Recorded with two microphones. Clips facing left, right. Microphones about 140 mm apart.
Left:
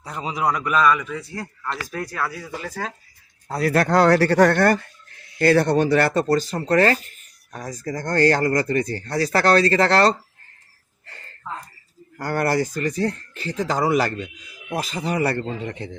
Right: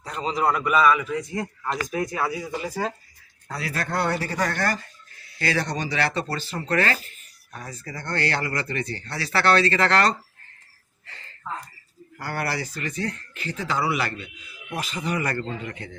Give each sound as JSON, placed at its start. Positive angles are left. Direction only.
{"t": 0.0, "sound": "a man's voice", "side_deg": 10}
{"t": 0.4, "sound": "a man's voice", "side_deg": -5}
{"t": 3.7, "sound": "speech", "side_deg": 80}
{"t": 12.1, "sound": "a man's voice", "side_deg": 45}